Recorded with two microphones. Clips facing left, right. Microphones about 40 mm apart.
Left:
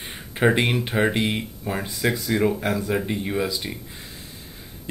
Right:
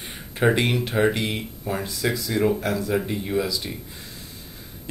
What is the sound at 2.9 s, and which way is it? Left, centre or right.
Speech, centre.